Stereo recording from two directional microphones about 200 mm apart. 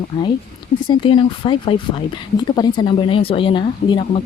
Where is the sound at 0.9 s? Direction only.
25° left (ahead or behind).